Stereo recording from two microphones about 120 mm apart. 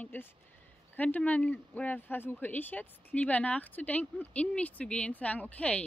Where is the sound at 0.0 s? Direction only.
15° left (ahead or behind).